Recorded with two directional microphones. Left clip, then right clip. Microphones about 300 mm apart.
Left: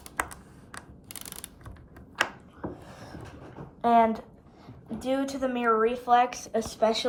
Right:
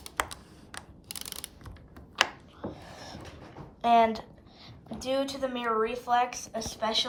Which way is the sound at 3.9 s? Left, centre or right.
Right.